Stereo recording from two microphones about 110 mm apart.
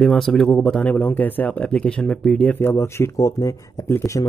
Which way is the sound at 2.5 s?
20° left (ahead or behind).